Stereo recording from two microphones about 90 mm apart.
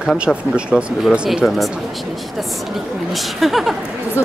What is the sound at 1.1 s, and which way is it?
Speech, 10° right (ahead or behind).